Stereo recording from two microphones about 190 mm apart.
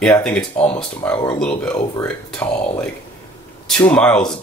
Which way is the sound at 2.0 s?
10° left (ahead or behind).